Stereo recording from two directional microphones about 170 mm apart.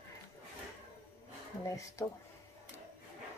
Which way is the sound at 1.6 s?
20° left (ahead or behind).